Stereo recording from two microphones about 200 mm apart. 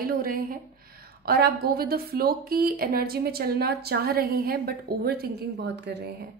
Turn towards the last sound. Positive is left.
turn(degrees=-60)  # may be behind; listen again after turning